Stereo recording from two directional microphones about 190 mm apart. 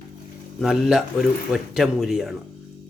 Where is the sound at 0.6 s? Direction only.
Centre (ahead or behind).